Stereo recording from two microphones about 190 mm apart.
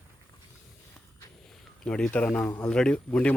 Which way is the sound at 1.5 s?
5° left (ahead or behind).